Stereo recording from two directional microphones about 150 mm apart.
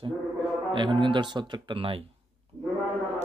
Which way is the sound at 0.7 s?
30° right (ahead or behind).